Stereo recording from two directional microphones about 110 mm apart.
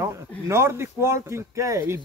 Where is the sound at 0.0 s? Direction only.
25° right (ahead or behind).